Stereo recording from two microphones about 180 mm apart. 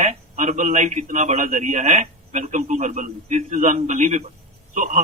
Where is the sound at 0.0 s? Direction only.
40° right (ahead or behind).